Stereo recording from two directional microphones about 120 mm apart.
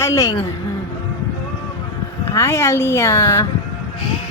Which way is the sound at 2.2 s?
25° left (ahead or behind).